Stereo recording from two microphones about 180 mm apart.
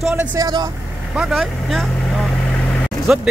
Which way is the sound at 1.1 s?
Centre (ahead or behind).